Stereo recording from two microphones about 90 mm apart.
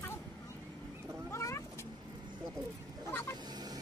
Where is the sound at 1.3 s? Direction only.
30° left (ahead or behind).